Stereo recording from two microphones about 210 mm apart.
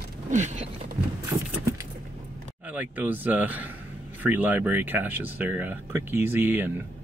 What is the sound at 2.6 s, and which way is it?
Speech, 5° right (ahead or behind).